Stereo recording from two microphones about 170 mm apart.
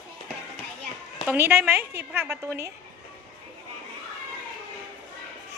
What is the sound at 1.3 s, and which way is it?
A woman's voice, 15° right (ahead or behind).